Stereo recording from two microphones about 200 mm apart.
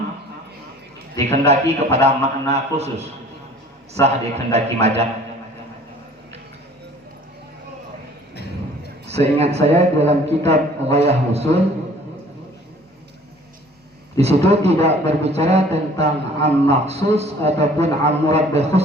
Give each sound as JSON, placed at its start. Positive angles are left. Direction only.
{"t": 1.3, "sound": "a man's voice", "side_deg": -30}
{"t": 9.0, "sound": "a man's voice", "side_deg": -30}
{"t": 14.2, "sound": "a man's voice", "side_deg": -30}